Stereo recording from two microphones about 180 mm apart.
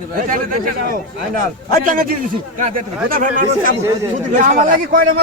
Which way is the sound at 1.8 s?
45° right (ahead or behind).